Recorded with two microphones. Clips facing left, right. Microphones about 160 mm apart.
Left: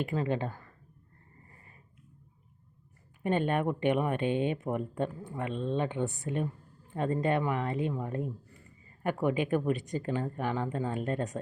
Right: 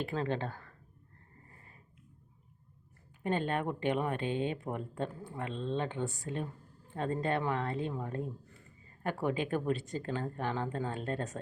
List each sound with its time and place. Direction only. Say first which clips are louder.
0.0 s speech: left 3 dB; 10° left (ahead or behind)
3.2 s speech: left 4 dB; 20° left (ahead or behind)
9.2 s speech: left 4 dB; 15° left (ahead or behind)